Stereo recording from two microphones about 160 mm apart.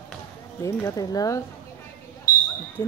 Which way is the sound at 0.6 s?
20° left (ahead or behind).